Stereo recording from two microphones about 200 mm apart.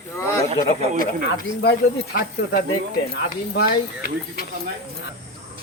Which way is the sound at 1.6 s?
55° left (ahead or behind).